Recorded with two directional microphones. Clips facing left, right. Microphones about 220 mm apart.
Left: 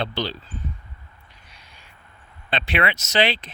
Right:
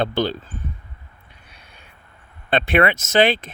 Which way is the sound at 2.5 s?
50° right (ahead or behind).